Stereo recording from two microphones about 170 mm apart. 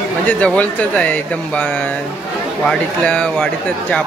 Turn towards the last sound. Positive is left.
turn(degrees=5)  # may be behind; listen again after turning